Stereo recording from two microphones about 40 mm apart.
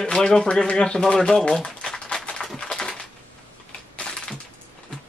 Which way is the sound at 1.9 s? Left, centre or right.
Centre.